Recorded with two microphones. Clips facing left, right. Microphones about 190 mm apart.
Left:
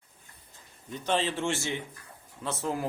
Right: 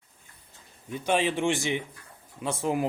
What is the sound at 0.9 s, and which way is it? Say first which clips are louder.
A man's voice: right 3 dB; 10° right (ahead or behind).